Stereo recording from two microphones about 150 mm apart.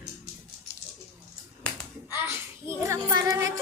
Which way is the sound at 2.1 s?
15° right (ahead or behind).